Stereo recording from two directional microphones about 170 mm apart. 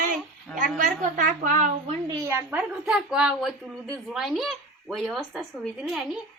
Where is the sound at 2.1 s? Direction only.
15° right (ahead or behind).